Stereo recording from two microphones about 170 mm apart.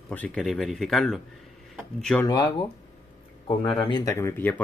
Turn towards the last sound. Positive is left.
turn(degrees=15)  # may be behind; listen again after turning